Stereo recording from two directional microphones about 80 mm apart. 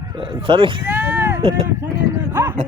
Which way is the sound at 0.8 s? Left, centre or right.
Right.